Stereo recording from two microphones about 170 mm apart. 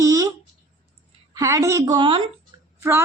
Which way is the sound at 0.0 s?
20° right (ahead or behind).